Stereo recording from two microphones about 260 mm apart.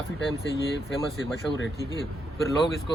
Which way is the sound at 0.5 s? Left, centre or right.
Left.